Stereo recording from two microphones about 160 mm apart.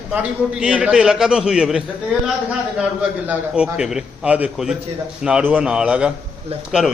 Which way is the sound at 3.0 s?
5° right (ahead or behind).